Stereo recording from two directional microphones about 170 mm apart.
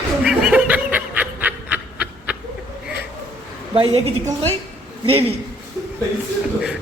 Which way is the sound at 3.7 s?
35° right (ahead or behind).